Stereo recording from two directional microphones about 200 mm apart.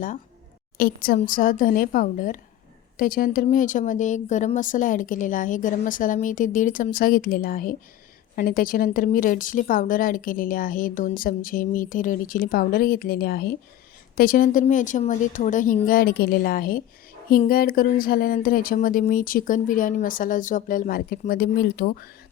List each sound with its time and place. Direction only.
0.8 s a woman's voice: 50° left (ahead or behind)